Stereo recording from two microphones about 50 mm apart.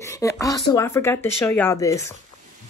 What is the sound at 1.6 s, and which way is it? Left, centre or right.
Speech, left.